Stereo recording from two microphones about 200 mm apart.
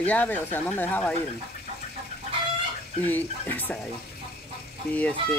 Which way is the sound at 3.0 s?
10° left (ahead or behind).